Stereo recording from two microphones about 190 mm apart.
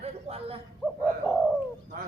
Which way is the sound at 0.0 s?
35° right (ahead or behind).